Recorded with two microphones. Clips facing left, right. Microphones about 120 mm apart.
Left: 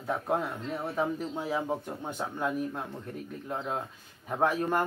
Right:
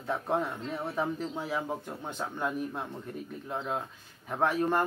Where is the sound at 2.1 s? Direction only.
10° left (ahead or behind).